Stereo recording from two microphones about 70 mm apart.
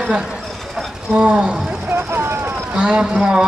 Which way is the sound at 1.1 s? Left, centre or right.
Centre.